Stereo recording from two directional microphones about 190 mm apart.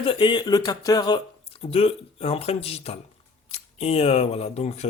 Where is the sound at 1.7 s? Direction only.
30° left (ahead or behind).